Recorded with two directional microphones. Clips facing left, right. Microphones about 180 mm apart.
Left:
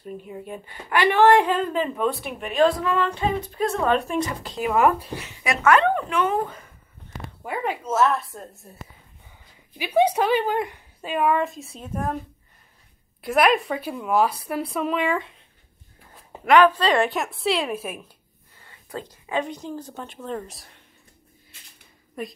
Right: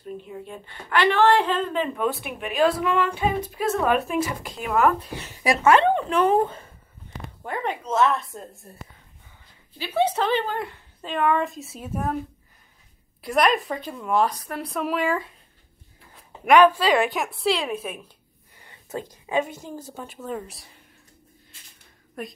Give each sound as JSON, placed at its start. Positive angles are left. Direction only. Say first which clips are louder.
{"t": 0.2, "sound": "a woman's voice", "louder": "left 2 dB", "side_deg": 10}
{"t": 1.5, "sound": "a woman's voice", "louder": "left 1 dB", "side_deg": 0}
{"t": 5.2, "sound": "speech", "louder": "right 3 dB", "side_deg": -35}
{"t": 7.4, "sound": "a woman's voice", "louder": "left 1 dB", "side_deg": 10}
{"t": 9.8, "sound": "a woman's voice", "louder": "left 3 dB", "side_deg": 15}
{"t": 13.2, "sound": "a woman's voice", "louder": "left 2 dB", "side_deg": 0}
{"t": 16.4, "sound": "a woman's voice", "louder": "right 1 dB", "side_deg": -15}
{"t": 18.6, "sound": "speech", "louder": "right 2 dB", "side_deg": -20}
{"t": 22.2, "sound": "a woman's voice", "louder": "left 2 dB", "side_deg": 0}